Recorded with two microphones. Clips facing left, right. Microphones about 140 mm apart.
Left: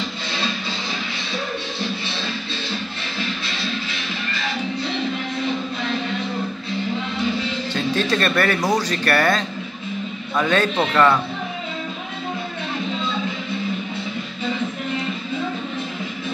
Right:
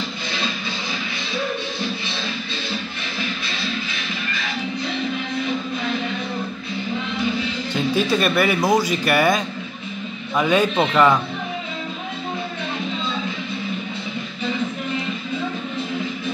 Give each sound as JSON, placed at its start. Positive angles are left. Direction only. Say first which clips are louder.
{"t": 7.7, "sound": "speech", "louder": "right 2 dB", "side_deg": -10}